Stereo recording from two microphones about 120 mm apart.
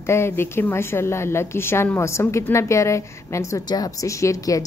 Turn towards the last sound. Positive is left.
turn(degrees=30)  # may be behind; listen again after turning